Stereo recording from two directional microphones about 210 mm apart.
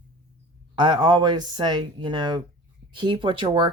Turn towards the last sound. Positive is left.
turn(degrees=-20)  # may be behind; listen again after turning